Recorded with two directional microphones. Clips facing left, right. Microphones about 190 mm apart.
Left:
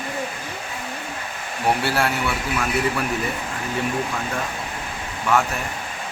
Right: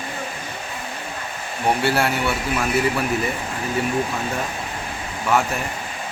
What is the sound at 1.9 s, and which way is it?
Speech, centre (ahead or behind).